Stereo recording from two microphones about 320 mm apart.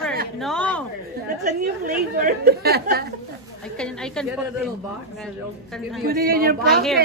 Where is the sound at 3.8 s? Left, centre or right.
Centre.